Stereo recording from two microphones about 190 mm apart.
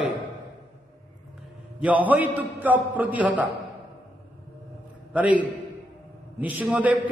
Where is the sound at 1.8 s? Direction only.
10° right (ahead or behind).